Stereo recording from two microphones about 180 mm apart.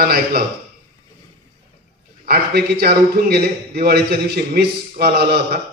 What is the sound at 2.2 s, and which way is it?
A man's voice, 60° right (ahead or behind).